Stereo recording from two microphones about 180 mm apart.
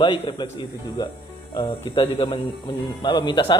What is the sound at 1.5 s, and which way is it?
Speech, 25° left (ahead or behind).